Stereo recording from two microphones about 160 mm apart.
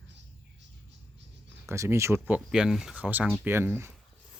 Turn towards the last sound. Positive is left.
turn(degrees=-15)  # may be behind; listen again after turning